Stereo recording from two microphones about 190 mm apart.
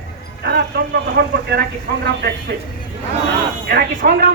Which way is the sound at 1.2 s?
55° right (ahead or behind).